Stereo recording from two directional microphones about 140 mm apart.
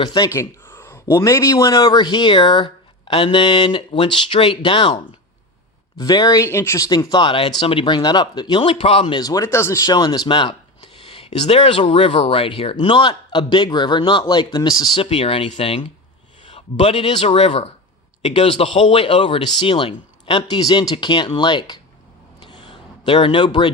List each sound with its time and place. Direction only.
0.0 s speech: 30° left (ahead or behind)
0.3 s a sound: 20° left (ahead or behind)
1.1 s speech: 20° left (ahead or behind)
6.0 s speech: 30° left (ahead or behind); by 9.1 s 45° left (ahead or behind)
9.1 s speech: 25° left (ahead or behind)
22.4 s a sound: 35° left (ahead or behind)